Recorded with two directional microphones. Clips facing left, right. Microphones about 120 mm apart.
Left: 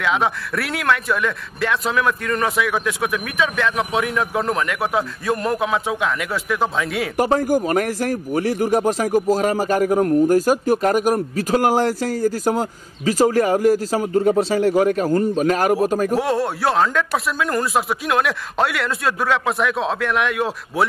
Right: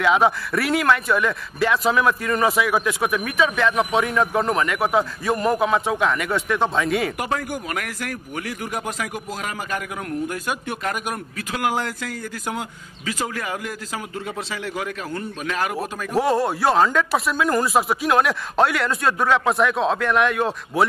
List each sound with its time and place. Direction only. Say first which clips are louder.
0.0 s speech: right 2 dB; centre (ahead or behind)
7.2 s speech: left 9 dB; 35° left (ahead or behind)
16.1 s speech: even; centre (ahead or behind)